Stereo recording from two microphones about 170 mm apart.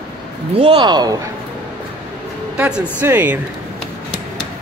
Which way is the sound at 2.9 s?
10° right (ahead or behind).